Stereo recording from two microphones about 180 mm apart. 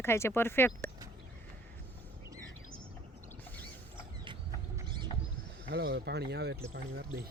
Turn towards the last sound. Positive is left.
turn(degrees=-65)  # may be behind; listen again after turning